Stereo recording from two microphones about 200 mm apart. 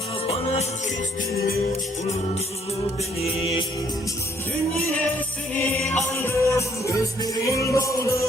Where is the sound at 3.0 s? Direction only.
30° left (ahead or behind).